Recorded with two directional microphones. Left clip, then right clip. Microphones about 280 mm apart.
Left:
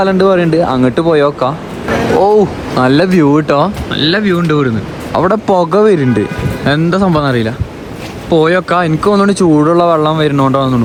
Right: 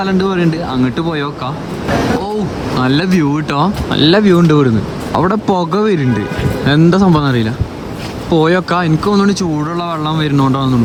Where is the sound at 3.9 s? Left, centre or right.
Centre.